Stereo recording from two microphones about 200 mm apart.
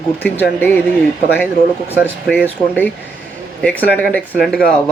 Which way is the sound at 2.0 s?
10° right (ahead or behind).